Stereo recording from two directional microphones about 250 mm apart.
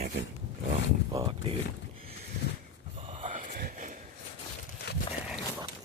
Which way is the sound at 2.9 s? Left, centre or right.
Right.